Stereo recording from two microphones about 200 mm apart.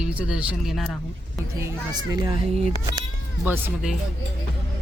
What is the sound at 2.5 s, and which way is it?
Speech, 30° right (ahead or behind).